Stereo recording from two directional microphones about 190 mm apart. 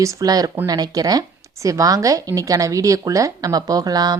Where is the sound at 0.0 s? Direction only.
15° right (ahead or behind).